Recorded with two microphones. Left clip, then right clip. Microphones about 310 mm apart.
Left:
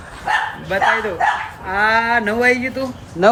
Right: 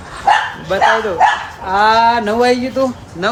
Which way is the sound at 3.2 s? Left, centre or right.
Centre.